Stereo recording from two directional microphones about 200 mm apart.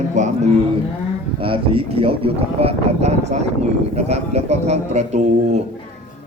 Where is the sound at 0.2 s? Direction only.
35° right (ahead or behind).